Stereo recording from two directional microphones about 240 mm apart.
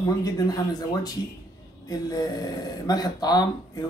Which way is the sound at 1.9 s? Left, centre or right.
Centre.